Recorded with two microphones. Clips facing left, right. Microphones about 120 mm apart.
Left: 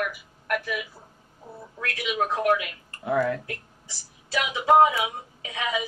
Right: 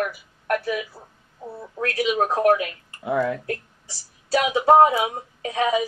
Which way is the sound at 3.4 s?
40° right (ahead or behind).